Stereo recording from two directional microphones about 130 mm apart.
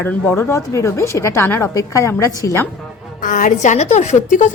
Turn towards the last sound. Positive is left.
turn(degrees=70)  # may be behind; listen again after turning